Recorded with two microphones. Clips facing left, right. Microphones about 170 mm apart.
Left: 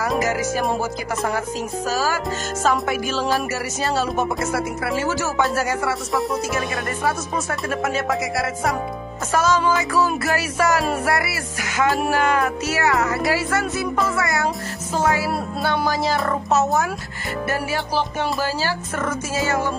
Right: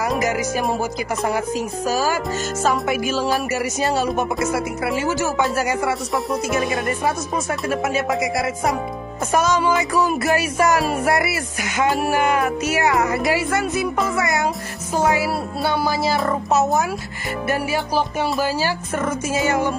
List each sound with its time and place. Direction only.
0.2 s speech: 15° right (ahead or behind)
1.9 s speech: 15° right (ahead or behind)
7.7 s speech: 10° right (ahead or behind)
9.3 s speech: 15° right (ahead or behind)